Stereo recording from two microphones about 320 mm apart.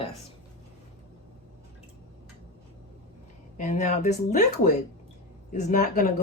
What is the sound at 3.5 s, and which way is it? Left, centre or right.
Speech, left.